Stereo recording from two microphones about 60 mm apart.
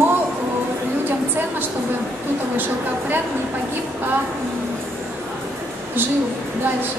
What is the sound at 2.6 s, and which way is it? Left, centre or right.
Speech, right.